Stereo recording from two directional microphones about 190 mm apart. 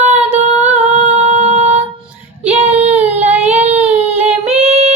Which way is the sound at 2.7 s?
35° right (ahead or behind).